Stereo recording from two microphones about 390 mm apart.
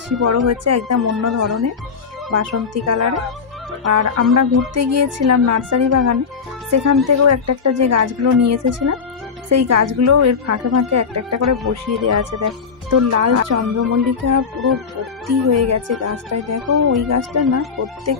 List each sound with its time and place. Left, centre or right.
0.2 s speech: right
2.3 s speech: right